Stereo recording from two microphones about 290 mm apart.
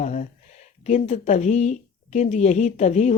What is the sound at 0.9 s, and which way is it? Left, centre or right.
Speech, left.